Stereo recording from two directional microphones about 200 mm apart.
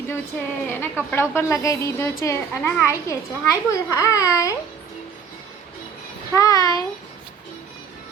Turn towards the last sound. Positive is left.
turn(degrees=20)  # may be behind; listen again after turning